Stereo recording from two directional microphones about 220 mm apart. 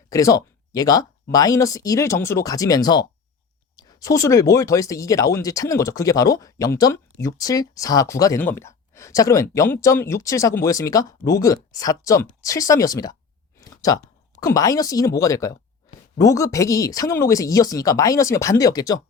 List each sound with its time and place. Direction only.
0.1 s speech: 15° left (ahead or behind)
13.6 s a sound: 15° left (ahead or behind)
14.4 s speech: 15° left (ahead or behind)